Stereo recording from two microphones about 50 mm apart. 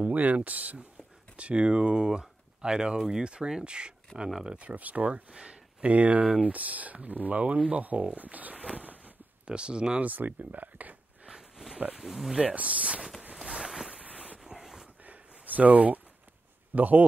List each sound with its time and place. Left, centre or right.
0.1 s speech: right
4.1 s speech: centre
4.5 s speech: right
8.7 s a sound: right
9.5 s speech: centre
10.0 s speech: right
11.2 s pig: centre
12.0 s speech: centre
12.4 s speech: right
13.4 s boat: centre
14.0 s a sound: right
14.4 s a sound: centre
15.0 s a sound: right
16.7 s speech: right